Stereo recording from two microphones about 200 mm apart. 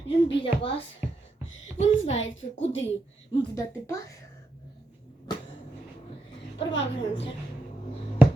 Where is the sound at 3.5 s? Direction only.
15° left (ahead or behind).